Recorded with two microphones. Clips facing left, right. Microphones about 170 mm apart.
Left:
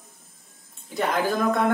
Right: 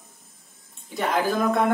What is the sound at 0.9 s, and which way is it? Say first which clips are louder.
Speech: even; centre (ahead or behind).